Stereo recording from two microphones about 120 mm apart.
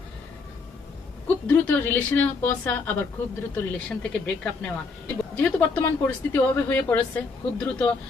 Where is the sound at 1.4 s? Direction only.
15° left (ahead or behind).